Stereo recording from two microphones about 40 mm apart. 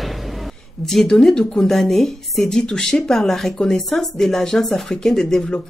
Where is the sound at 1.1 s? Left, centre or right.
Centre.